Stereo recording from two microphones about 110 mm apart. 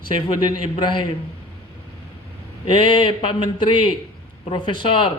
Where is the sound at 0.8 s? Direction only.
45° left (ahead or behind).